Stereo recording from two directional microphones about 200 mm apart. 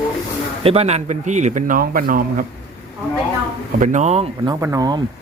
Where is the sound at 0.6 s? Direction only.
30° right (ahead or behind); by 2.4 s 45° right (ahead or behind).